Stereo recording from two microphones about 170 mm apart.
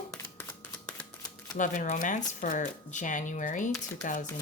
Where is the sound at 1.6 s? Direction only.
50° left (ahead or behind).